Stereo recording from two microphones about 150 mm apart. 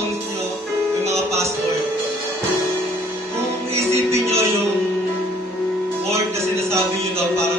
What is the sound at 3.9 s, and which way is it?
Music, 20° right (ahead or behind).